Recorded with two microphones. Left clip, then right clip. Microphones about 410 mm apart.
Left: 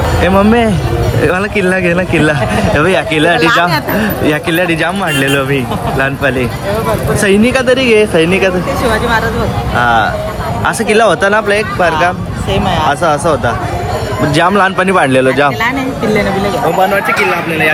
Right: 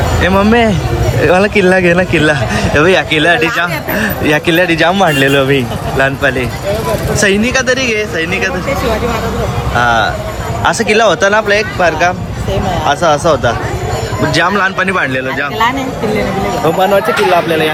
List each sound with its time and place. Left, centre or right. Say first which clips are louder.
0.2 s speech: even; centre
9.7 s speech: left 1 dB; centre